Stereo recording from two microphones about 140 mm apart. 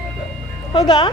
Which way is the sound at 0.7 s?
30° left (ahead or behind).